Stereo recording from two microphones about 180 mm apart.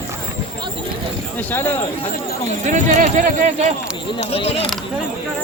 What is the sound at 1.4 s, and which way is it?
Speech, 10° left (ahead or behind).